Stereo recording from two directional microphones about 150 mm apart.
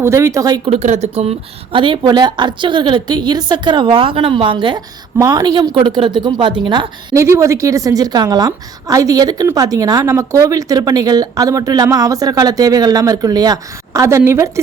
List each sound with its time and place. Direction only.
0.0 s speech: 20° right (ahead or behind)
0.6 s speech: 45° right (ahead or behind); by 14.6 s 20° right (ahead or behind)